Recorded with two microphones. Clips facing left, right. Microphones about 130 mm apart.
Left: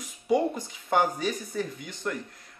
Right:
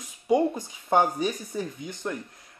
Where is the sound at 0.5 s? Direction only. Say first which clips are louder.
Right 3 dB; 25° right (ahead or behind).